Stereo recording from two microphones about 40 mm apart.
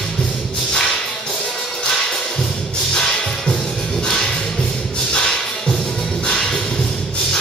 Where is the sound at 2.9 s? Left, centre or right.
Centre.